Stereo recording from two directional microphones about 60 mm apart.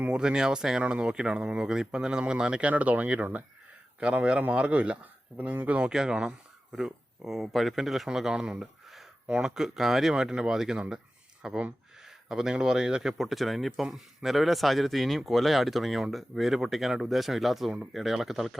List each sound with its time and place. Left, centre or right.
0.0 s speech: centre
5.9 s speech: centre
9.2 s speech: centre